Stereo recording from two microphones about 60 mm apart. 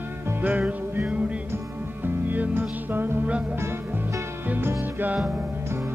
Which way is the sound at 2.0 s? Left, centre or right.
Right.